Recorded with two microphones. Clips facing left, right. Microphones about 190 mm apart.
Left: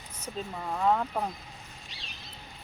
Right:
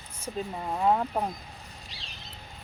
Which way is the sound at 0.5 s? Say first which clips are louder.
Right 1 dB; 20° right (ahead or behind).